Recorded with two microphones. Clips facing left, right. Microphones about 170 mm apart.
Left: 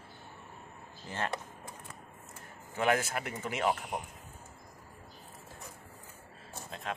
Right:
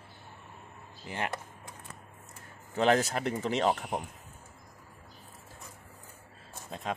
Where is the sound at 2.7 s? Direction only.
25° right (ahead or behind).